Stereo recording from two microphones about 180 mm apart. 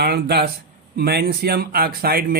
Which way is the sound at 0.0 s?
65° right (ahead or behind).